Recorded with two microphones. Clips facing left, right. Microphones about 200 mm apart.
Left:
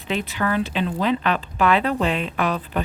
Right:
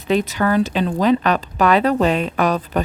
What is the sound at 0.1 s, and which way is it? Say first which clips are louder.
Speech: right 6 dB; 40° right (ahead or behind).